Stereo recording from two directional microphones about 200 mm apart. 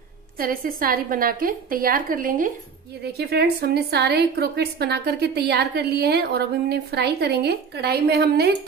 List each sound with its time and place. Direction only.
0.4 s a woman's voice: 45° right (ahead or behind)
3.1 s a woman's voice: 55° right (ahead or behind)